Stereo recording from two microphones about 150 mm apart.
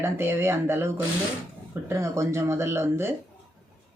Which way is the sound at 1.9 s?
20° right (ahead or behind).